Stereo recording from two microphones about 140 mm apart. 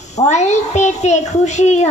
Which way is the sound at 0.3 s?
55° left (ahead or behind).